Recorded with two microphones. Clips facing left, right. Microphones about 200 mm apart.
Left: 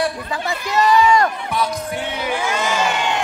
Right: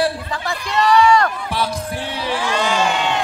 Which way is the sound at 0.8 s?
10° left (ahead or behind).